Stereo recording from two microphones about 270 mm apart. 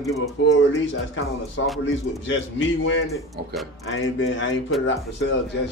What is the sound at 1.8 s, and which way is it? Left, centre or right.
A man's voice, left.